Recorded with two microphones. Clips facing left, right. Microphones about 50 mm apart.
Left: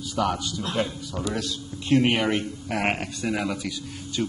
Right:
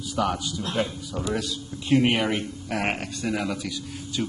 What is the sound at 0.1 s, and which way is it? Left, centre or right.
Speech, centre.